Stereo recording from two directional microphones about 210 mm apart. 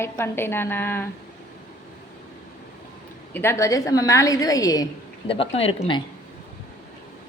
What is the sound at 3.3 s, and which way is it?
Speech, 10° left (ahead or behind).